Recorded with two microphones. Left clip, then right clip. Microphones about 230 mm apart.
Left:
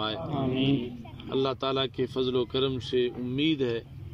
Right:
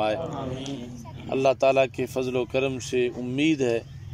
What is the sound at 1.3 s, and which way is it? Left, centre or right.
Speech, centre.